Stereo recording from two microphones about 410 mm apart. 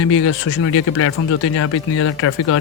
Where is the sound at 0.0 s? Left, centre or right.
Left.